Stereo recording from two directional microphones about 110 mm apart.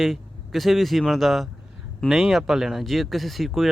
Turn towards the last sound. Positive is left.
turn(degrees=0)  # may be behind; listen again after turning